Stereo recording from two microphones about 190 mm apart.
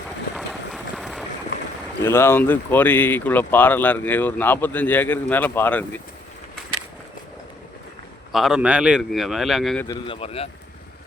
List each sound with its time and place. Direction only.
0.3 s run: centre (ahead or behind)
2.0 s speech: 15° left (ahead or behind)
8.3 s speech: centre (ahead or behind)
9.8 s a man's voice: 20° left (ahead or behind)
10.2 s speech: 30° left (ahead or behind)